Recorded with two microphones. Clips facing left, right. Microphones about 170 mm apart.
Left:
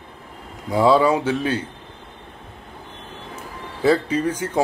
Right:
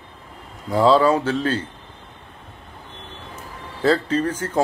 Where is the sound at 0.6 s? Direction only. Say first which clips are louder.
Even; 15° left (ahead or behind).